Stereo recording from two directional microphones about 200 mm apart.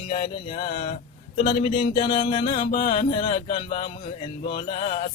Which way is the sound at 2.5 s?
40° left (ahead or behind).